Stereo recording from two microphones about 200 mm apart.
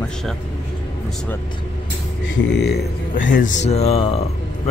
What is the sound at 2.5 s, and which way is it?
Speech, 60° left (ahead or behind).